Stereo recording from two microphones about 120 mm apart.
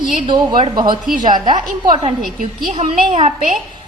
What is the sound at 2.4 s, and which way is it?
Speech, 70° right (ahead or behind).